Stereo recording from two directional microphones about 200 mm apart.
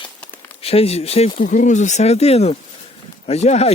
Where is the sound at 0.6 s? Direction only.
30° left (ahead or behind).